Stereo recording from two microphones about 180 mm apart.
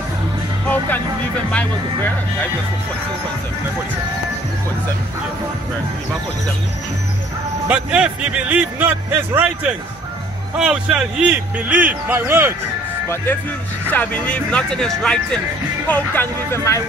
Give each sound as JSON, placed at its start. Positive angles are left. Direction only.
{"t": 0.7, "sound": "music", "side_deg": 10}
{"t": 1.5, "sound": "speech", "side_deg": 10}
{"t": 7.6, "sound": "a man's voice", "side_deg": -5}
{"t": 10.6, "sound": "a man's voice", "side_deg": -5}
{"t": 13.8, "sound": "speech", "side_deg": 10}